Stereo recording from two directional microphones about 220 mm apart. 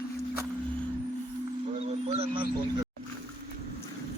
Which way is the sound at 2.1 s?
25° right (ahead or behind).